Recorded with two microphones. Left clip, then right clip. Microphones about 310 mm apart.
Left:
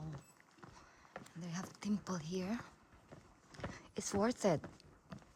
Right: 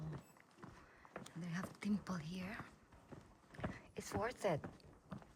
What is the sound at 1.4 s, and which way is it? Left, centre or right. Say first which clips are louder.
Speech: left 1 dB; centre.